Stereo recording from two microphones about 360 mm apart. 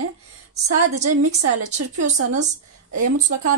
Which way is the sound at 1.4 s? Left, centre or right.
Right.